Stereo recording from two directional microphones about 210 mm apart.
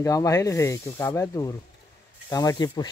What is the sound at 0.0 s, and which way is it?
Speech, 15° left (ahead or behind).